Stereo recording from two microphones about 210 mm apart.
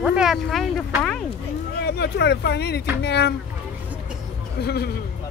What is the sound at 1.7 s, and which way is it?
Speech, 50° left (ahead or behind).